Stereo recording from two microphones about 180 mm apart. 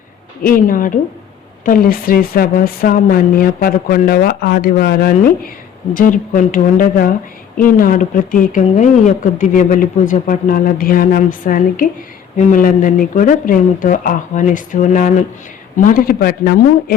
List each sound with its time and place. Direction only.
0.4 s a woman's voice: 50° left (ahead or behind)
5.9 s speech: 50° left (ahead or behind)